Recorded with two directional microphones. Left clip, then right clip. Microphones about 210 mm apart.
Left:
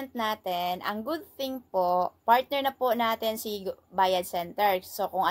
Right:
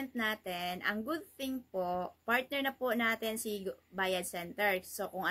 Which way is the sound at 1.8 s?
30° left (ahead or behind).